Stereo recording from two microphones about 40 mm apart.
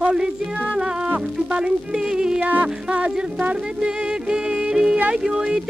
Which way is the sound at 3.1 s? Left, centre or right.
Right.